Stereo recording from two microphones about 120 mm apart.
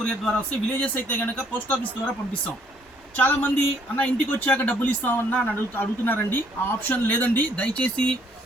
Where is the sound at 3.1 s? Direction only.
15° left (ahead or behind).